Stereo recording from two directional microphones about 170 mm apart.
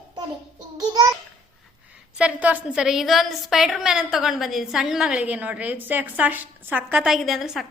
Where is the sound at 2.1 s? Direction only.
10° right (ahead or behind).